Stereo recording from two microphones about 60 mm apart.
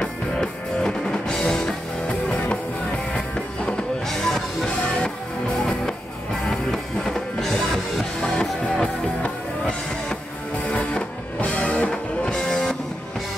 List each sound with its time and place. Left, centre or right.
0.0 s music: centre
2.0 s music: left; by 5.1 s centre
6.7 s music: centre